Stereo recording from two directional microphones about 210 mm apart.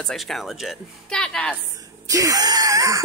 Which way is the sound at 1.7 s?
15° right (ahead or behind).